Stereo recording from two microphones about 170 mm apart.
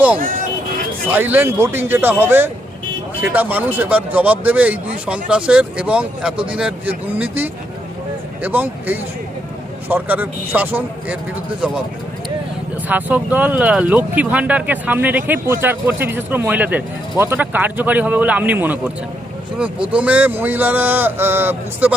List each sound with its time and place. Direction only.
0.2 s speech: 55° right (ahead or behind)
1.1 s speech: 10° right (ahead or behind)
12.9 s speech: 10° right (ahead or behind)